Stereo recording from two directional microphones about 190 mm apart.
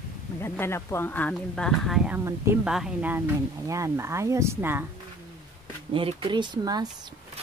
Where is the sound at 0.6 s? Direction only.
10° left (ahead or behind).